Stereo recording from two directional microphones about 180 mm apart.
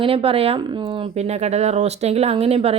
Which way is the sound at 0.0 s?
30° right (ahead or behind).